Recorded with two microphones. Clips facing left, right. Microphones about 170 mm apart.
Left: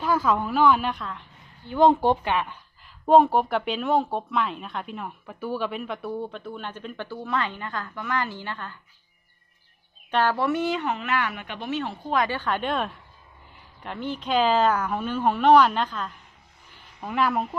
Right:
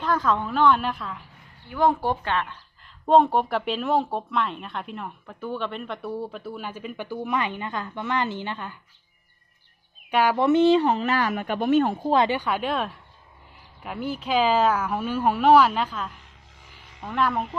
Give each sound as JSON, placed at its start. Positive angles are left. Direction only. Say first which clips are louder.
{"t": 0.0, "sound": "speech", "louder": "left 1 dB", "side_deg": 5}
{"t": 1.6, "sound": "speech", "louder": "left 4 dB", "side_deg": 20}
{"t": 10.1, "sound": "speech", "louder": "right 3 dB", "side_deg": -10}
{"t": 12.3, "sound": "speech", "louder": "right 1 dB", "side_deg": -10}